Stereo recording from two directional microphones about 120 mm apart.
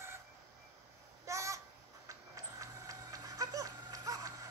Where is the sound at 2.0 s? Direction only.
30° right (ahead or behind).